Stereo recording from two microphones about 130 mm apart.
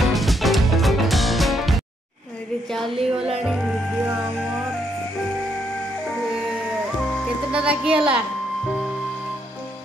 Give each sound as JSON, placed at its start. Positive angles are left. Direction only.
{"t": 0.0, "sound": "music", "side_deg": 0}
{"t": 2.7, "sound": "speech", "side_deg": 0}
{"t": 7.5, "sound": "a woman's voice", "side_deg": -10}